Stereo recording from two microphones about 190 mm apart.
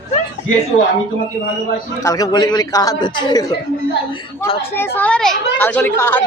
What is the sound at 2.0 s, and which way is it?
A man's voice, 20° left (ahead or behind).